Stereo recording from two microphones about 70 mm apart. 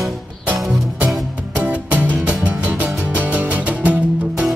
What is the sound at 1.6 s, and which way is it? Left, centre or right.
Music, right.